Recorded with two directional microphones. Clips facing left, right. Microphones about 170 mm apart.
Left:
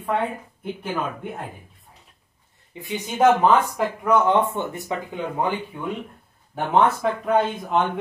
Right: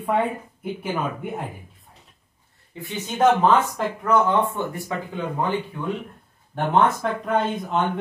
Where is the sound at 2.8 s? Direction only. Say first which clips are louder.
Left 1 dB; 15° left (ahead or behind).